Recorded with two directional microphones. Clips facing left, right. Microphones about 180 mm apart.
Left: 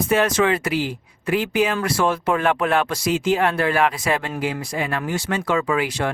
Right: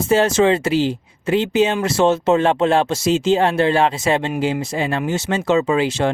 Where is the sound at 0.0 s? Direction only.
25° right (ahead or behind).